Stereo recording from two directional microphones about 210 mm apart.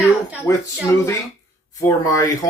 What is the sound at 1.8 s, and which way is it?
Speech, 15° left (ahead or behind).